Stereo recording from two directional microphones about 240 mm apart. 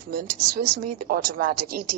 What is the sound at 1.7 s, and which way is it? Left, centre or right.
Speech, right.